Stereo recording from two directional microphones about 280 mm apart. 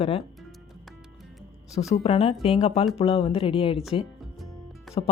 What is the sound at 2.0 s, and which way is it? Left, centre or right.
Speech, left.